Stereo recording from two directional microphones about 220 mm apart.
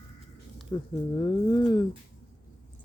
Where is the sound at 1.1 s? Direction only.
20° left (ahead or behind).